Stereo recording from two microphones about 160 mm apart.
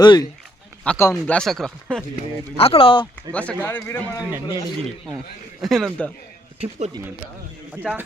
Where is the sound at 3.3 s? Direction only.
10° left (ahead or behind).